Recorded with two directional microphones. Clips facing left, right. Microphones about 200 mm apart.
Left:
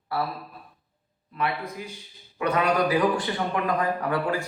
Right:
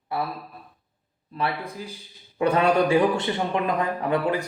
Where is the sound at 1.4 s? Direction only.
30° right (ahead or behind).